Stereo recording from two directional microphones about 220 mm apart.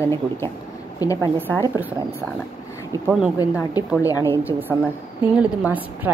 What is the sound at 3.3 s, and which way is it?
A woman's voice, 15° left (ahead or behind).